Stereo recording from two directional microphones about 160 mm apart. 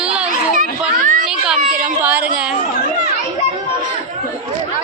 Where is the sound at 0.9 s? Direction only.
55° right (ahead or behind).